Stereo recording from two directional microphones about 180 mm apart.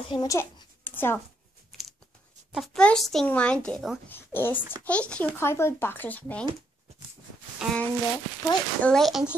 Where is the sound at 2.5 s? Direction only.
Centre (ahead or behind).